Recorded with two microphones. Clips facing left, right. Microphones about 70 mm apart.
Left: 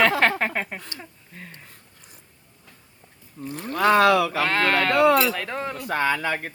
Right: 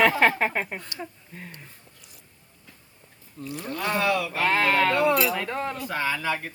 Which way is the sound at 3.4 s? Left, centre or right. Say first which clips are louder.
Left 1 dB; left.